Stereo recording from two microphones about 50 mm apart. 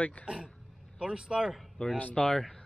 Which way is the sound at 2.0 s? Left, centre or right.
Left.